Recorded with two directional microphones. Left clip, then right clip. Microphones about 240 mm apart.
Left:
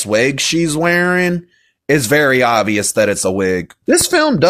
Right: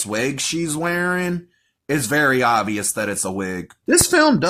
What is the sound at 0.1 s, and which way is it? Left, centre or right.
Speech, left.